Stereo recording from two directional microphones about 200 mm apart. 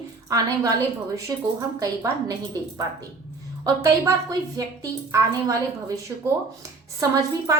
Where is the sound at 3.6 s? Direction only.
15° right (ahead or behind).